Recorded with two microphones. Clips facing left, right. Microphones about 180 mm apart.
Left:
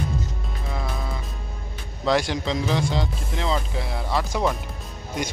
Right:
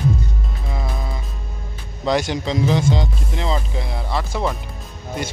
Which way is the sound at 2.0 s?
Centre (ahead or behind).